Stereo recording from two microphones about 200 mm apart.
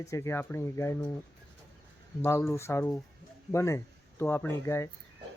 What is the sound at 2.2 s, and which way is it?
Speech, 10° left (ahead or behind).